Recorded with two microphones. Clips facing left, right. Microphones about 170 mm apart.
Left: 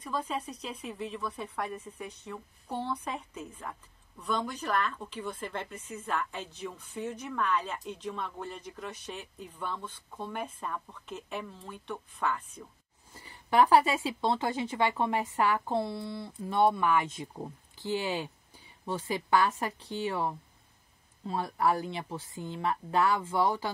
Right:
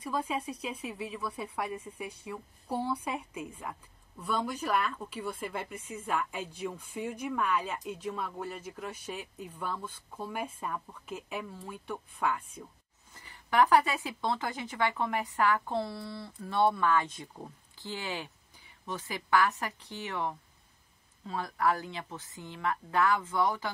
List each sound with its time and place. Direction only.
0.0 s a woman's voice: 10° right (ahead or behind)
13.1 s speech: 25° left (ahead or behind)